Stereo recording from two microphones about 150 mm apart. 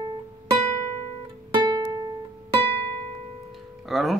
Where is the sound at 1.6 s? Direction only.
25° right (ahead or behind).